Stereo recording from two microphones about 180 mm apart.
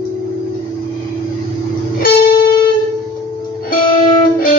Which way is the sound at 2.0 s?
55° left (ahead or behind).